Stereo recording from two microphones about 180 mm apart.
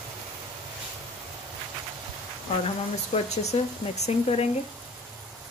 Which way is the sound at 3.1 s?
35° left (ahead or behind).